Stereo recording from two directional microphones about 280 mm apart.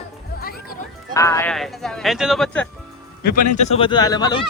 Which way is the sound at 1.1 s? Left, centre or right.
Centre.